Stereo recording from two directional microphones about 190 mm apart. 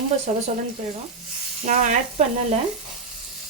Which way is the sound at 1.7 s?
40° right (ahead or behind).